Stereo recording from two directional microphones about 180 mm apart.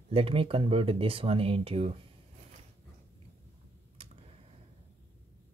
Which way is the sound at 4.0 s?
30° right (ahead or behind).